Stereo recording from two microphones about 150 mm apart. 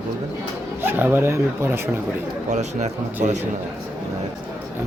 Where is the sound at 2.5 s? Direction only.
50° right (ahead or behind).